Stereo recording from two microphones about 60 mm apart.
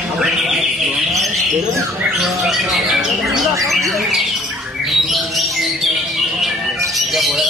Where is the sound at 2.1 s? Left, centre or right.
Centre.